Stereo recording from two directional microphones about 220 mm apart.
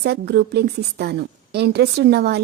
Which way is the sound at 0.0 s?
50° right (ahead or behind).